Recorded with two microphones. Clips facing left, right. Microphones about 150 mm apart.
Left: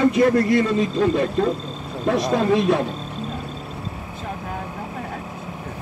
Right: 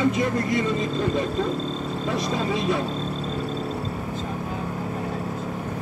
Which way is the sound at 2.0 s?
60° left (ahead or behind).